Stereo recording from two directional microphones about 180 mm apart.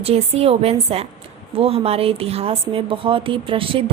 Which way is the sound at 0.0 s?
35° right (ahead or behind).